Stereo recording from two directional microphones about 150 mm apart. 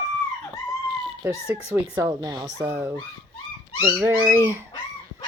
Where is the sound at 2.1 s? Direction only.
25° right (ahead or behind).